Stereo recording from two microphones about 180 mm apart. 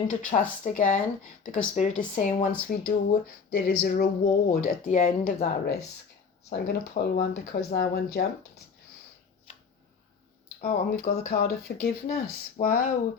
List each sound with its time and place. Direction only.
0.1 s speech: 45° left (ahead or behind)
3.5 s speech: 75° left (ahead or behind)
3.8 s speech: 45° left (ahead or behind)
10.6 s speech: 55° left (ahead or behind)